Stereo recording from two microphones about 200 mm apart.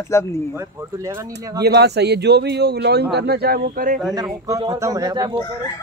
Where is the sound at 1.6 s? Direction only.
55° right (ahead or behind).